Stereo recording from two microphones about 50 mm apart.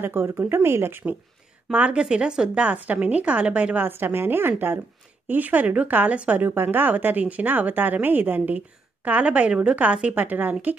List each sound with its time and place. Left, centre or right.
0.0 s a woman's voice: right
1.9 s a woman's voice: centre
3.8 s a woman's voice: right
5.3 s speech: right
6.4 s speech: right